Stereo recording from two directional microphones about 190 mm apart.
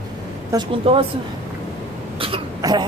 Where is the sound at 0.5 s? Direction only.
30° right (ahead or behind).